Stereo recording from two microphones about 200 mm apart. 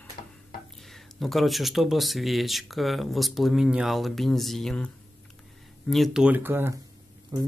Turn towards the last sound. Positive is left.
turn(degrees=-15)  # may be behind; listen again after turning